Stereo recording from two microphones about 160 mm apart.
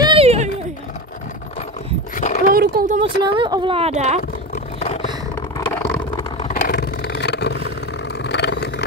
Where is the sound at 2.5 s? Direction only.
70° right (ahead or behind).